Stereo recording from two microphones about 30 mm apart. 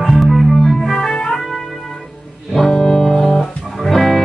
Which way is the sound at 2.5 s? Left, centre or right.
Centre.